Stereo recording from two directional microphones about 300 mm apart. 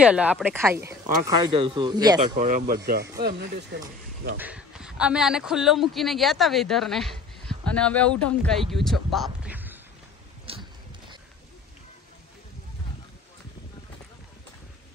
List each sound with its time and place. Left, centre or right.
0.0 s speech: centre; by 3.8 s right
4.4 s a man's voice: centre
10.5 s a sound: centre